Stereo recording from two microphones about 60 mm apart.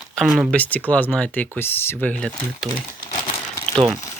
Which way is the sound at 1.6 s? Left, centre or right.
Left.